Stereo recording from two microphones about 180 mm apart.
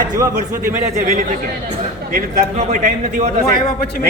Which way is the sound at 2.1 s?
40° right (ahead or behind).